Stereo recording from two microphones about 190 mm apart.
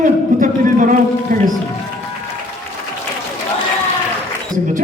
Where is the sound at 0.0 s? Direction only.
45° right (ahead or behind).